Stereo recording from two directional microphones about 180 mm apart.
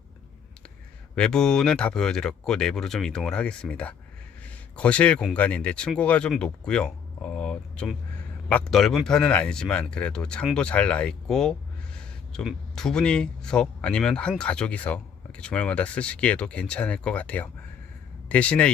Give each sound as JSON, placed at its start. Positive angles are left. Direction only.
{"t": 1.1, "sound": "speech", "side_deg": 5}